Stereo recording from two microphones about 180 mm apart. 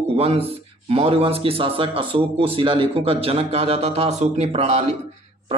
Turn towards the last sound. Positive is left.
turn(degrees=-35)  # may be behind; listen again after turning